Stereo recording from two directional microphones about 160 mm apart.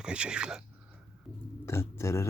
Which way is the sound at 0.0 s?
5° right (ahead or behind).